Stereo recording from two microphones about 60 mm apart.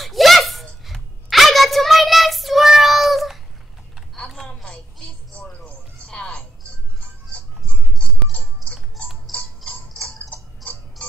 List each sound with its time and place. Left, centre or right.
0.0 s a sound: centre
0.8 s child singing: centre
6.0 s music: centre
9.3 s music: centre
9.9 s tick-tock: centre
10.3 s tick-tock: left